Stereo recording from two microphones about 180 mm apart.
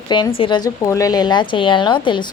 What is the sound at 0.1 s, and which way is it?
Speech, 25° left (ahead or behind).